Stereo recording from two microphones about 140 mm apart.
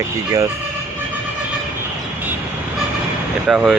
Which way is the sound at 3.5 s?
Centre (ahead or behind).